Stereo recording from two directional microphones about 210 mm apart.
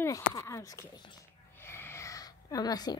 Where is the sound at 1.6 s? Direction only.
10° left (ahead or behind).